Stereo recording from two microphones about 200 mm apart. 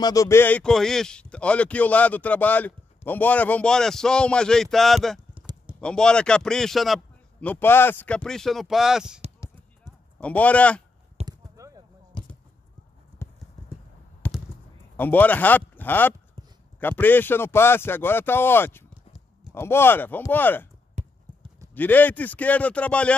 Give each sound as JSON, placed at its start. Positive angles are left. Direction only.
{"t": 0.0, "sound": "speech", "side_deg": 15}
{"t": 10.2, "sound": "speech", "side_deg": 5}
{"t": 11.2, "sound": "a sound", "side_deg": -15}
{"t": 13.2, "sound": "clip-clop", "side_deg": 10}
{"t": 14.2, "sound": "a sound", "side_deg": 10}
{"t": 15.0, "sound": "speech", "side_deg": 10}
{"t": 21.0, "sound": "clip-clop", "side_deg": -35}
{"t": 21.7, "sound": "speech", "side_deg": 10}